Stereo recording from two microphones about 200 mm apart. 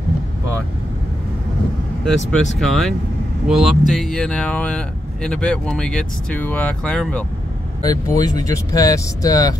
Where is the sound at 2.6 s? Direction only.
Centre (ahead or behind).